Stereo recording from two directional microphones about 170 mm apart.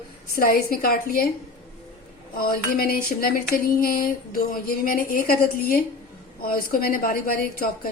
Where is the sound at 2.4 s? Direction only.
60° left (ahead or behind).